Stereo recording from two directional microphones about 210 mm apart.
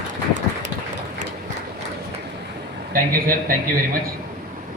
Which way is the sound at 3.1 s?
45° right (ahead or behind).